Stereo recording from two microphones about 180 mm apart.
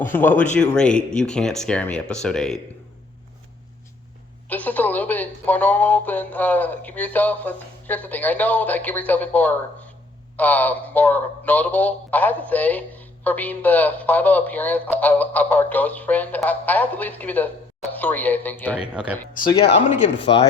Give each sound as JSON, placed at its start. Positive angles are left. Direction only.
{"t": 0.0, "sound": "speech", "side_deg": 10}
{"t": 4.4, "sound": "speech", "side_deg": 10}
{"t": 19.0, "sound": "speech", "side_deg": -5}
{"t": 20.2, "sound": "speech", "side_deg": 30}